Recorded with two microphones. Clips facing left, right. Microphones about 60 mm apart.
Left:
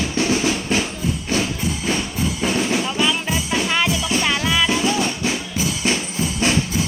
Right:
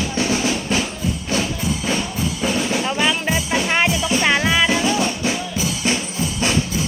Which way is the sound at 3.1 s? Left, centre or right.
Centre.